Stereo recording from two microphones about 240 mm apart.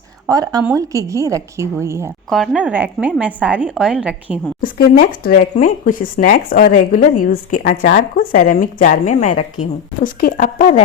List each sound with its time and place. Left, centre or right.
0.3 s a woman's voice: centre
2.3 s a woman's voice: centre
4.6 s speech: left